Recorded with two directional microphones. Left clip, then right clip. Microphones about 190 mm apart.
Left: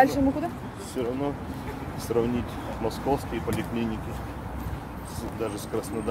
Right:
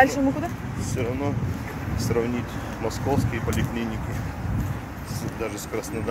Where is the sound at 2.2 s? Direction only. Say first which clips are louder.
Left 1 dB; 15° left (ahead or behind).